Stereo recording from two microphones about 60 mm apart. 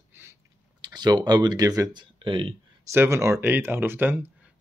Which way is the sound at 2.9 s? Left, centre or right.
Right.